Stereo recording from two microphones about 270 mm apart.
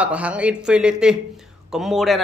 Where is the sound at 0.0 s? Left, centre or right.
Centre.